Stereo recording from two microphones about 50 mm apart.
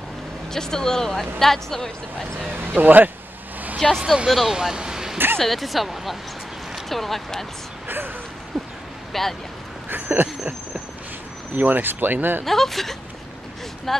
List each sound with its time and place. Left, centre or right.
0.5 s speech: centre
2.5 s speech: right
3.8 s speech: centre
4.6 s speech: centre
5.1 s a sound: right
5.4 s speech: centre
8.5 s a sound: centre
9.1 s speech: centre
9.8 s speech: right
11.5 s speech: right
12.4 s speech: centre